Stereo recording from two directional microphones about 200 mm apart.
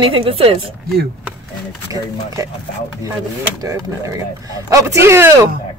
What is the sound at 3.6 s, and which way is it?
Speech, 15° right (ahead or behind).